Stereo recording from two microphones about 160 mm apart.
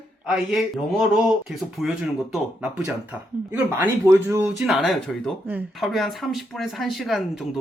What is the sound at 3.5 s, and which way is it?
Speech, 15° right (ahead or behind).